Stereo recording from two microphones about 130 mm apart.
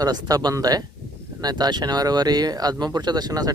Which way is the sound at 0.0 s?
30° right (ahead or behind).